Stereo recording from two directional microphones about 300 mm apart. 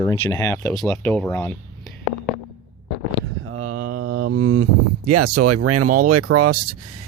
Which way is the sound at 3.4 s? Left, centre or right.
Right.